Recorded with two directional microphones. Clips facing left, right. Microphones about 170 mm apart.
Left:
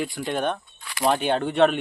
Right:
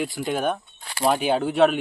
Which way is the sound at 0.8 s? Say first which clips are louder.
Right 1 dB; 35° right (ahead or behind).